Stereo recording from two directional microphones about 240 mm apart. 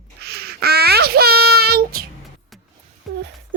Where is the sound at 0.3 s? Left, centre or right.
Right.